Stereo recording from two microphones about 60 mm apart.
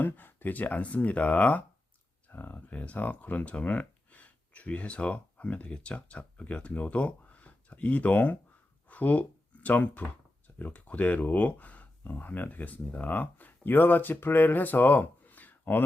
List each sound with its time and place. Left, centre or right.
0.0 s speech: left